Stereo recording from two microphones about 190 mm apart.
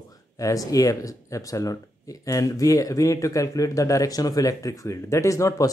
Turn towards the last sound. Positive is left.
turn(degrees=15)  # may be behind; listen again after turning